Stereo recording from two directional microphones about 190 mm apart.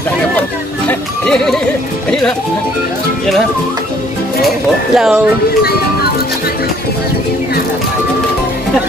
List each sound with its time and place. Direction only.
0.8 s music: 5° left (ahead or behind)
4.9 s speech: 5° right (ahead or behind)